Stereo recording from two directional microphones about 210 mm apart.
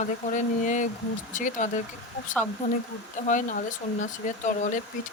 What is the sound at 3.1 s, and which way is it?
Speech, 35° left (ahead or behind).